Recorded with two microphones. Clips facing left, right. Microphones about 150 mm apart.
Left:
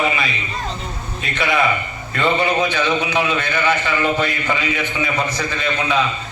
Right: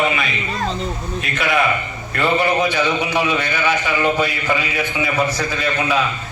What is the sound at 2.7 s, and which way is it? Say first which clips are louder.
A man's voice: even; 10° right (ahead or behind).